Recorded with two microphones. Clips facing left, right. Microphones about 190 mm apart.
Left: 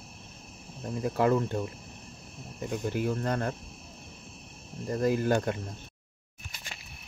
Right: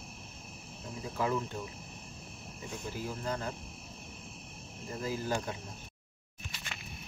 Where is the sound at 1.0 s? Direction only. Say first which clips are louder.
Left 8 dB; 65° left (ahead or behind).